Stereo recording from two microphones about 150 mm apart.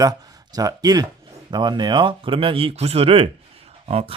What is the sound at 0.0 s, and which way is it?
Speech, 25° right (ahead or behind).